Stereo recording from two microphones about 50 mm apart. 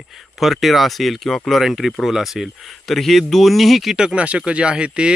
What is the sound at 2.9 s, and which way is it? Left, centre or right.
Speech, centre.